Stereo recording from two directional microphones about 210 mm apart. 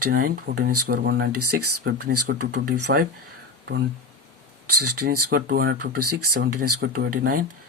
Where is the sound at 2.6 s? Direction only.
45° right (ahead or behind).